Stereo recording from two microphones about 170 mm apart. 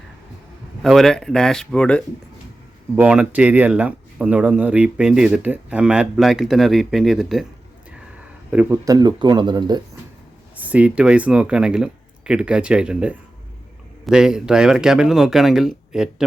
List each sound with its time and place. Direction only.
0.8 s speech: centre (ahead or behind)
2.9 s speech: 5° right (ahead or behind)
8.4 s speech: 10° right (ahead or behind)
10.6 s speech: 10° right (ahead or behind)